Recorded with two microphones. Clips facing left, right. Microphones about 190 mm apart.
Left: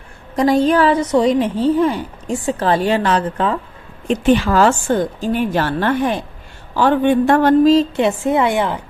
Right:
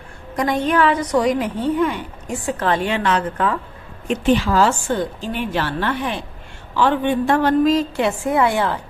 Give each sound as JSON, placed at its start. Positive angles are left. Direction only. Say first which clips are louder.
{"t": 0.3, "sound": "a woman's voice", "louder": "left 5 dB", "side_deg": 35}
{"t": 4.4, "sound": "a woman's voice", "louder": "left 3 dB", "side_deg": 55}
{"t": 7.6, "sound": "a woman's voice", "louder": "left 5 dB", "side_deg": 25}